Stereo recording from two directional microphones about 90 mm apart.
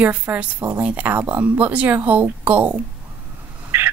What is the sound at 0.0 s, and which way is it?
Speech, 20° right (ahead or behind).